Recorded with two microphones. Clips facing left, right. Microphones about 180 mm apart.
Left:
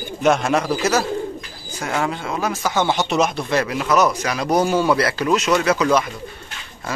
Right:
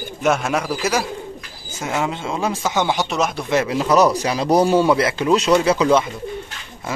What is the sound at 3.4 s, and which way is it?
Speech, 20° right (ahead or behind).